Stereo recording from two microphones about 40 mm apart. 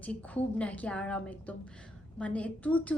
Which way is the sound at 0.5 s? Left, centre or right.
Left.